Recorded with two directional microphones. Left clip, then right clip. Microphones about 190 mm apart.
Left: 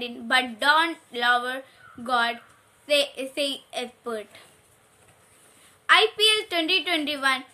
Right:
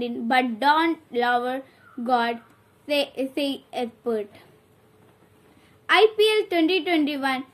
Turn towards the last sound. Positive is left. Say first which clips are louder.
# even
turn(degrees=20)  # may be behind; listen again after turning